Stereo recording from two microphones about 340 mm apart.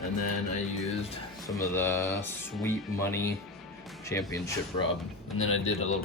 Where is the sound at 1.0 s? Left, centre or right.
Centre.